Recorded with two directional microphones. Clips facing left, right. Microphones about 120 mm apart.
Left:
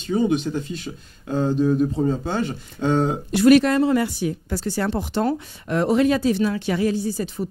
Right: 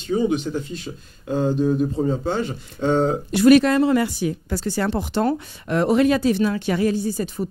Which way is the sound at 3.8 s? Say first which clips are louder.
Right 1 dB; 90° right.